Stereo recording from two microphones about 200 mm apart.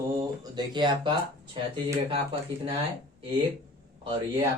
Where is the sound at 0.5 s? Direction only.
25° right (ahead or behind).